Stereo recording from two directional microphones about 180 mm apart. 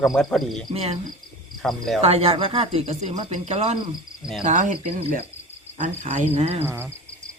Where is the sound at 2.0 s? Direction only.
35° right (ahead or behind).